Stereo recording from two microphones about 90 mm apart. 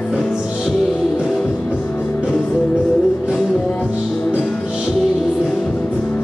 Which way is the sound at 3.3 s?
Centre (ahead or behind).